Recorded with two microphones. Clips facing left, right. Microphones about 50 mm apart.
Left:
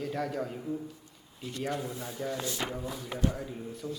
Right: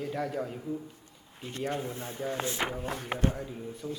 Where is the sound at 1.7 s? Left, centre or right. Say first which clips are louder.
Right 1 dB; right.